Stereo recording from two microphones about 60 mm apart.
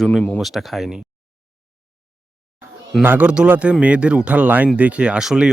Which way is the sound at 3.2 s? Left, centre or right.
Centre.